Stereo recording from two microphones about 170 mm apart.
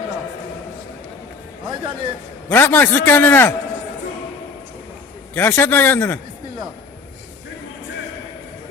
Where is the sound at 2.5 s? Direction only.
10° left (ahead or behind).